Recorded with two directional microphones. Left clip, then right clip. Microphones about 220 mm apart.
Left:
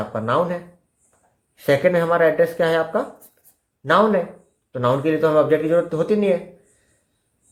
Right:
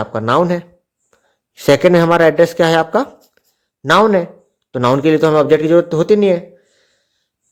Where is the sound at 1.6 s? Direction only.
50° right (ahead or behind).